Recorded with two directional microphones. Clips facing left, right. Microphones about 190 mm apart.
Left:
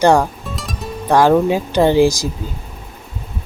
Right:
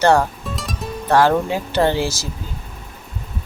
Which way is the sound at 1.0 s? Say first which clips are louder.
Left 4 dB; 15° left (ahead or behind).